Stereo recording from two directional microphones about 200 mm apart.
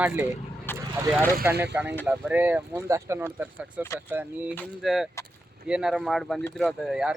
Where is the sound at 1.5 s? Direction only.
10° right (ahead or behind).